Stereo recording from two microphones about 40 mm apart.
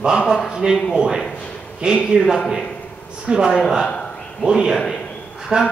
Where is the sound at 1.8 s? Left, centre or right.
Right.